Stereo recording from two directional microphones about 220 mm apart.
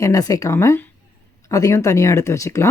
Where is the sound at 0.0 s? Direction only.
15° left (ahead or behind).